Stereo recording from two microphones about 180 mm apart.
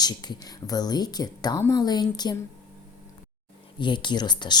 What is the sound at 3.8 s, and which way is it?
Speech, 25° left (ahead or behind).